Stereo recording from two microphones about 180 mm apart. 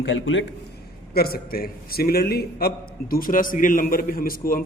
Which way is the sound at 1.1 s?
60° left (ahead or behind).